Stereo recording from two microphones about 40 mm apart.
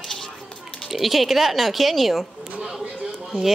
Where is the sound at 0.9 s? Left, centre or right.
Centre.